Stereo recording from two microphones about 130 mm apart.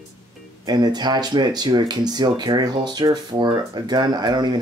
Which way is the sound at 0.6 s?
35° right (ahead or behind).